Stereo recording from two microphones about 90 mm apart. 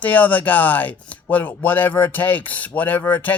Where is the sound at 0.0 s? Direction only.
20° left (ahead or behind).